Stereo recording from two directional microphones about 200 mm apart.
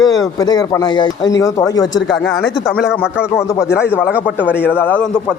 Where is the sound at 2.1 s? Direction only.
5° left (ahead or behind).